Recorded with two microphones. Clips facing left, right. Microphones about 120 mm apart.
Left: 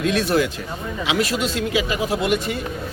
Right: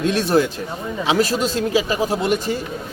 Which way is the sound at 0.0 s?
35° right (ahead or behind).